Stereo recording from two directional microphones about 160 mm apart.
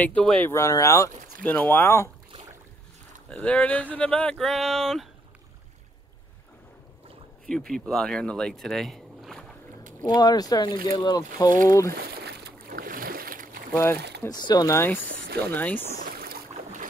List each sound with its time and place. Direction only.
0.0 s speech: 5° left (ahead or behind)
0.5 s speech: 20° left (ahead or behind)
3.3 s speech: 5° left (ahead or behind)
7.4 s speech: 5° left (ahead or behind)
10.0 s speech: 25° left (ahead or behind)
11.9 s boat: 80° right; by 13.6 s 65° right (ahead or behind)
13.9 s speech: 90° right
14.3 s speech: 25° left (ahead or behind)
15.0 s speech: 85° right
15.5 s speech: 10° left (ahead or behind)
16.1 s boat: 70° right (ahead or behind)